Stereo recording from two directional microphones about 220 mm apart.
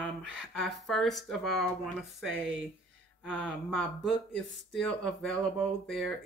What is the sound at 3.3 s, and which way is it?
Speech, 5° left (ahead or behind).